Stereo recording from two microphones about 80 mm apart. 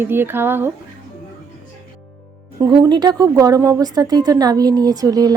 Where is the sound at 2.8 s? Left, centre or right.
Right.